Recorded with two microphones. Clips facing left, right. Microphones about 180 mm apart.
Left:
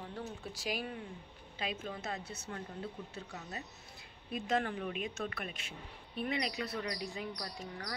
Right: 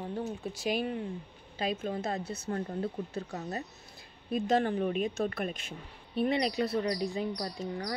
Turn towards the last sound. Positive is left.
turn(degrees=-30)  # may be behind; listen again after turning